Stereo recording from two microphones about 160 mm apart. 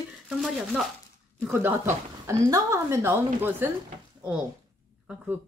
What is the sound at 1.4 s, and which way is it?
Speech, 10° right (ahead or behind).